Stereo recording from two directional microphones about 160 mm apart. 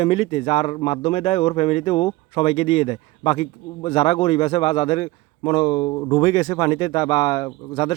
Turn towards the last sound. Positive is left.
turn(degrees=30)  # may be behind; listen again after turning